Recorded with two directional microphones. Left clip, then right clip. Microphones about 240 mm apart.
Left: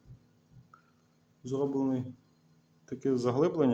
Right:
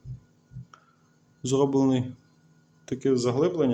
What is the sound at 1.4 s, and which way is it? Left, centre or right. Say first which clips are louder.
Speech: right 8 dB; centre.